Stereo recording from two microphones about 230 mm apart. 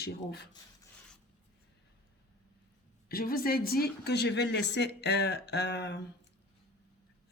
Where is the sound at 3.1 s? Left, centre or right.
Left.